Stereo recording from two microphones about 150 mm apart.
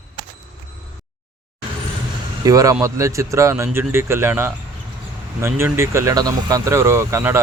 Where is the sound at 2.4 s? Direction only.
25° right (ahead or behind).